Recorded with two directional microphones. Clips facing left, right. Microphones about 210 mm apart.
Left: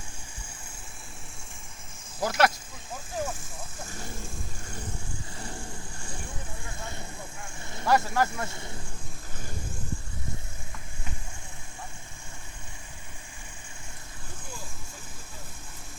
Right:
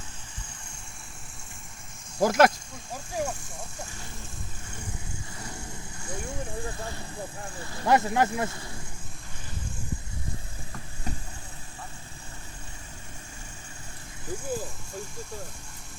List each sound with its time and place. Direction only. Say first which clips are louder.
2.1 s speech: right 5 dB; 45° right (ahead or behind)
2.9 s speech: right 2 dB; 15° right (ahead or behind)
3.4 s speech: right 1 dB; centre (ahead or behind)
7.6 s speech: right 2 dB; 20° left (ahead or behind)
7.9 s speech: right 2 dB; 20° right (ahead or behind)